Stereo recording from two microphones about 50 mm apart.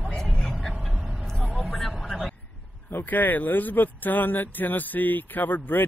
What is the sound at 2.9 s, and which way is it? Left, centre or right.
Speech, left.